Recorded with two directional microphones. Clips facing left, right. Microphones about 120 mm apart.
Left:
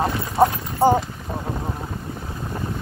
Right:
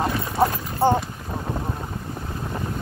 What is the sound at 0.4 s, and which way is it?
Clip-clop, 15° left (ahead or behind).